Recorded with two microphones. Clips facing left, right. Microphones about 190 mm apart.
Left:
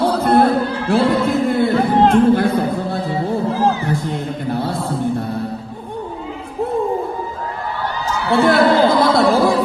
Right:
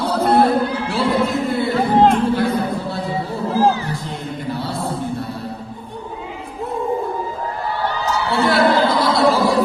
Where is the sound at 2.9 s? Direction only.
50° left (ahead or behind).